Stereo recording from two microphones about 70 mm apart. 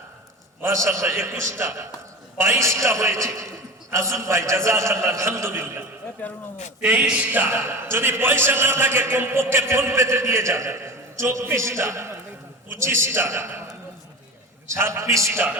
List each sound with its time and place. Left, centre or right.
0.6 s a man's voice: right
6.2 s speech: left
6.8 s a man's voice: centre
7.4 s a man's voice: right
14.7 s a man's voice: right